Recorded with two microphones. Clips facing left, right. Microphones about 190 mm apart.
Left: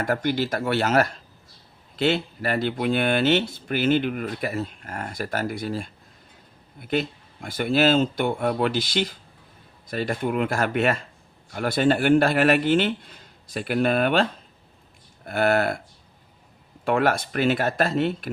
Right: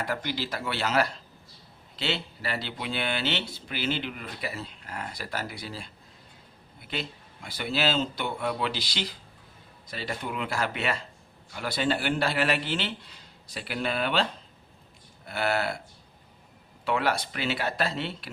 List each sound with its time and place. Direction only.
0.0 s speech: 50° left (ahead or behind)
16.8 s speech: 50° left (ahead or behind)